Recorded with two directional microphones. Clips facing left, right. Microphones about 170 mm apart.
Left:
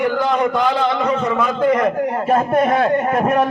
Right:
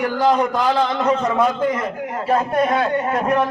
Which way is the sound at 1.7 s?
65° left (ahead or behind).